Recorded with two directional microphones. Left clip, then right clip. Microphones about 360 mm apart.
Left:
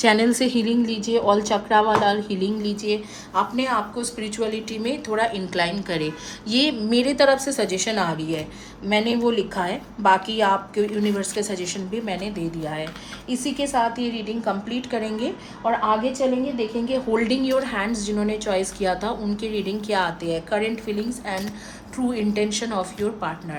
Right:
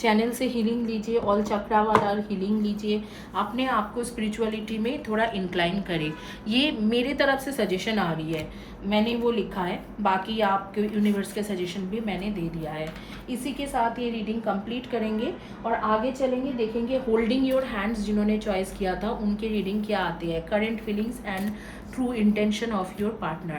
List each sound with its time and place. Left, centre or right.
0.0 s a woman's voice: left
16.9 s a woman's voice: centre